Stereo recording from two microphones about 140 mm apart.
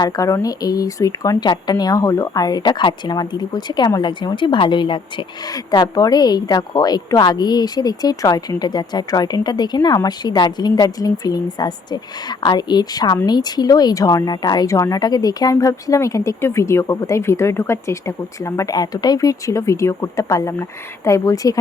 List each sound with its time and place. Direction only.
0.0 s a woman's voice: 25° left (ahead or behind)